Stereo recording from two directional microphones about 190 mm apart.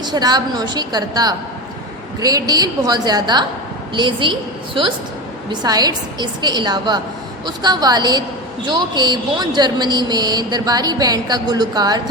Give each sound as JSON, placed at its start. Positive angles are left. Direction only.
{"t": 0.0, "sound": "speech", "side_deg": -20}